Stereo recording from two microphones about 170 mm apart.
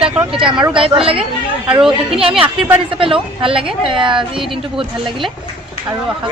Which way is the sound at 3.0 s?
30° right (ahead or behind).